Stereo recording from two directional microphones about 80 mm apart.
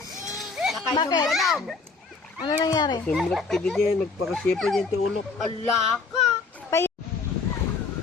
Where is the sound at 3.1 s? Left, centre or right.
Centre.